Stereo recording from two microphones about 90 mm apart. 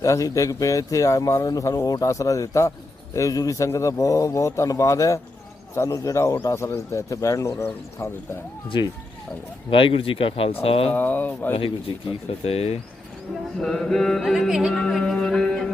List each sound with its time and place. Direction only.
0.0 s a man's voice: 40° left (ahead or behind)
9.6 s speech: 75° left (ahead or behind)
10.9 s speech: 20° left (ahead or behind)
11.9 s speech: 70° left (ahead or behind)
12.3 s speech: 90° left
13.6 s mantra: 5° left (ahead or behind)